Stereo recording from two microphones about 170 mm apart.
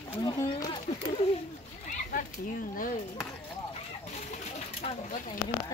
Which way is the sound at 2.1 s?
55° left (ahead or behind).